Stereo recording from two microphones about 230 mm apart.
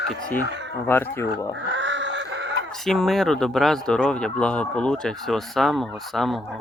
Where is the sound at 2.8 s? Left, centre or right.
Centre.